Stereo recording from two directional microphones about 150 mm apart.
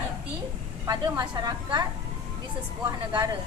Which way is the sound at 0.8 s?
25° right (ahead or behind).